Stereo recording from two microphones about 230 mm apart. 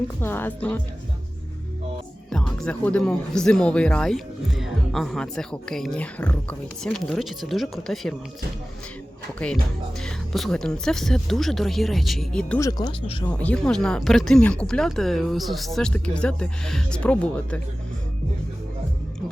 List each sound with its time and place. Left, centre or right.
0.2 s speech: centre
2.3 s speech: centre
9.4 s speech: centre
12.5 s speech: centre
13.2 s speech: centre